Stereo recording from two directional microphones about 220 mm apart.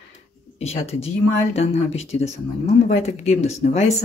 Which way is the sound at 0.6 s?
30° left (ahead or behind).